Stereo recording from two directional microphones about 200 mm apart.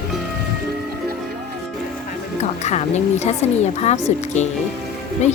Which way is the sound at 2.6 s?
35° left (ahead or behind).